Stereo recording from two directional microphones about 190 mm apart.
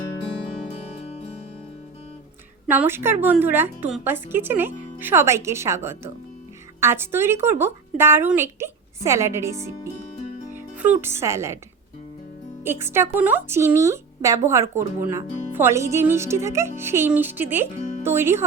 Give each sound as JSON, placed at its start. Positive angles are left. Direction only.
{"t": 2.6, "sound": "speech", "side_deg": -10}
{"t": 12.6, "sound": "speech", "side_deg": -10}
{"t": 17.7, "sound": "music", "side_deg": 40}
{"t": 18.0, "sound": "speech", "side_deg": -15}